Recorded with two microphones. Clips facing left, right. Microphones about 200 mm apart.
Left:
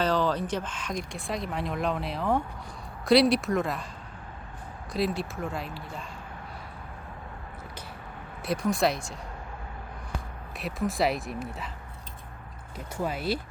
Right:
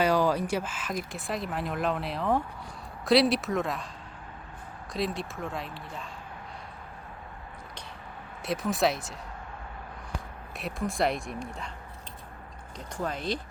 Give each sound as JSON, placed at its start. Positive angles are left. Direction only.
{"t": 0.0, "sound": "speech", "side_deg": -10}
{"t": 4.9, "sound": "speech", "side_deg": 0}
{"t": 8.4, "sound": "speech", "side_deg": 0}
{"t": 10.6, "sound": "speech", "side_deg": 0}
{"t": 12.7, "sound": "speech", "side_deg": 5}